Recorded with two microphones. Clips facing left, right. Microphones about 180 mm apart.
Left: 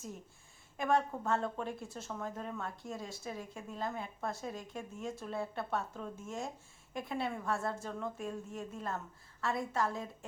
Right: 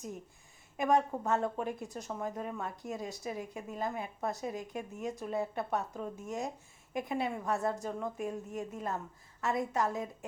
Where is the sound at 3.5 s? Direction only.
5° right (ahead or behind).